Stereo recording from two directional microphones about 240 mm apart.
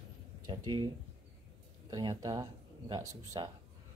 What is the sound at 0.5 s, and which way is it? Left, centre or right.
Speech, centre.